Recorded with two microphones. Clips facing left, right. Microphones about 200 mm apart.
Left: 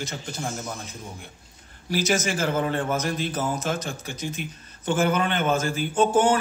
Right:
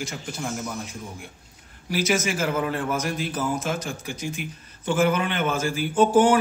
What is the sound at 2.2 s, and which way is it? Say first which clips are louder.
Speech: even; 5° right (ahead or behind).